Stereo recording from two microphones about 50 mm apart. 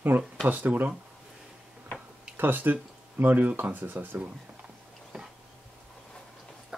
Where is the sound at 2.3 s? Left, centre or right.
Right.